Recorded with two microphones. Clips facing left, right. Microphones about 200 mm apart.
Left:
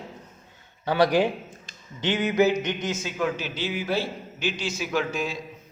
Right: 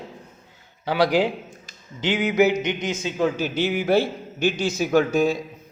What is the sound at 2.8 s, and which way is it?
Speech, 15° right (ahead or behind).